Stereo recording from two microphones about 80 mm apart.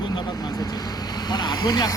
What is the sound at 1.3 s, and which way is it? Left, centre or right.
Speech, left.